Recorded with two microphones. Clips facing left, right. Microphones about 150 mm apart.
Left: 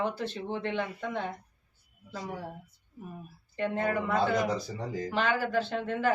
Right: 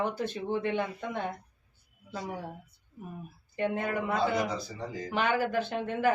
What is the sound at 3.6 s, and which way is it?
Speech, 15° right (ahead or behind).